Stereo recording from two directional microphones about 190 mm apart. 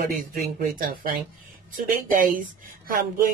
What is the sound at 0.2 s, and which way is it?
Speech, 50° right (ahead or behind).